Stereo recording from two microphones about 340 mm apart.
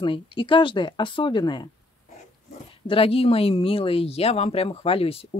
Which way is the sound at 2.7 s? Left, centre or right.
Centre.